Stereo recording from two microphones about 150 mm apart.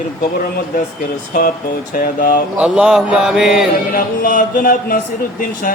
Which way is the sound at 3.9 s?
65° left (ahead or behind).